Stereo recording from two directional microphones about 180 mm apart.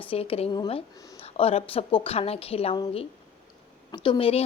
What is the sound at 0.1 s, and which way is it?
A woman's voice, 30° left (ahead or behind).